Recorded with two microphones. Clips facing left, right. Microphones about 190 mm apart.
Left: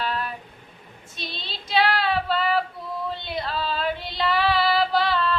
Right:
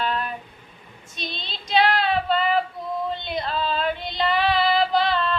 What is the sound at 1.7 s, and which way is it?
Female singing, 20° right (ahead or behind).